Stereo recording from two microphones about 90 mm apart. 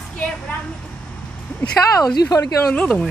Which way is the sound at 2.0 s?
40° left (ahead or behind).